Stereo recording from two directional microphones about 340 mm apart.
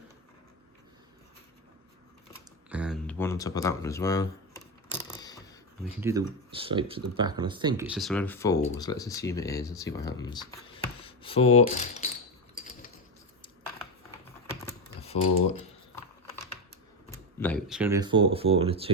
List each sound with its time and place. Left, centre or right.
2.6 s a sound: centre
6.0 s speech: centre
15.0 s speech: centre
17.1 s speech: centre